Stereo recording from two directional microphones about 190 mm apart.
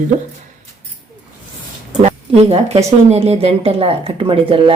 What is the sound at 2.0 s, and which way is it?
Speech, 35° right (ahead or behind).